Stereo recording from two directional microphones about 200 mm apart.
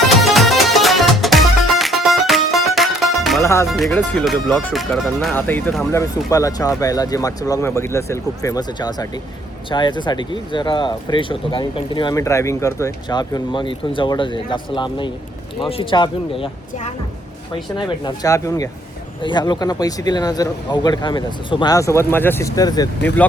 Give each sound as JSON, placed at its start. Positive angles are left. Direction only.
{"t": 0.0, "sound": "music", "side_deg": 0}
{"t": 3.4, "sound": "speech", "side_deg": 15}
{"t": 3.7, "sound": "speech", "side_deg": 0}
{"t": 17.5, "sound": "speech", "side_deg": 20}